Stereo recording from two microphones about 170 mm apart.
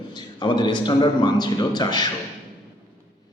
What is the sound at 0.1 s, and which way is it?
A man's voice, 25° left (ahead or behind).